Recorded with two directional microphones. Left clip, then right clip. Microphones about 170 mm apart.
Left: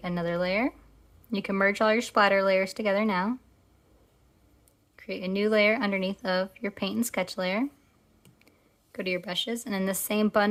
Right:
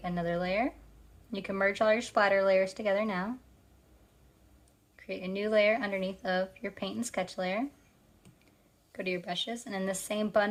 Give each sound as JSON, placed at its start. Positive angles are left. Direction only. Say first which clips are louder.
{"t": 0.0, "sound": "speech", "louder": "left 4 dB", "side_deg": 35}
{"t": 4.9, "sound": "speech", "louder": "left 5 dB", "side_deg": 35}
{"t": 8.9, "sound": "speech", "louder": "left 4 dB", "side_deg": 35}